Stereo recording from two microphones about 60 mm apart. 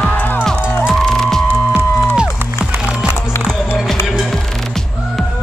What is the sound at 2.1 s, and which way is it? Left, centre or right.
Music, centre.